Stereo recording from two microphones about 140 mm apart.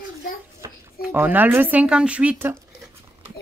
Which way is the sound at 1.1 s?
15° right (ahead or behind).